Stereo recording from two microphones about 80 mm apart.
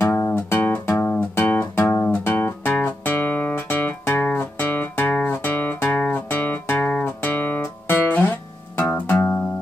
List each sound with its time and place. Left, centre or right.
0.1 s music: left
7.0 s guitar: left
8.7 s music: centre